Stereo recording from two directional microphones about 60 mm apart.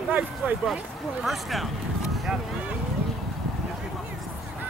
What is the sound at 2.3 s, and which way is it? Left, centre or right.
Speech, centre.